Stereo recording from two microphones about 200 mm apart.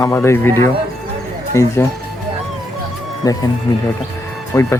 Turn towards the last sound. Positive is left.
turn(degrees=15)  # may be behind; listen again after turning